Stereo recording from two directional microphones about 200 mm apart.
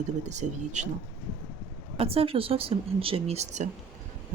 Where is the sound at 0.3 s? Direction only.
35° right (ahead or behind).